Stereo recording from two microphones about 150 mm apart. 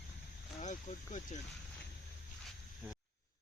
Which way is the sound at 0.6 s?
55° left (ahead or behind).